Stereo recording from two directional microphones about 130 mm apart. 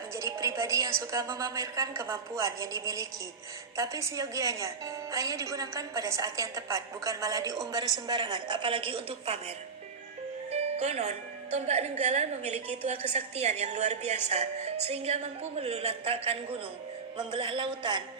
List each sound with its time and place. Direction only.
0.2 s music: 25° right (ahead or behind)
1.1 s a woman's voice: 25° right (ahead or behind); by 9.4 s 45° right (ahead or behind)
10.5 s a woman's voice: 55° right (ahead or behind); by 18.0 s 40° right (ahead or behind)